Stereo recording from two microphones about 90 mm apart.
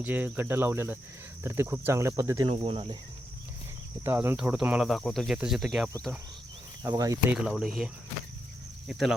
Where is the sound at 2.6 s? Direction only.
75° right (ahead or behind).